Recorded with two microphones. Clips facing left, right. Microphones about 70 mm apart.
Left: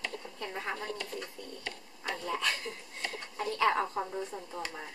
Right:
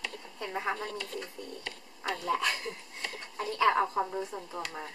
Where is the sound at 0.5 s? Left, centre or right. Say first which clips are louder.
Right 5 dB; right.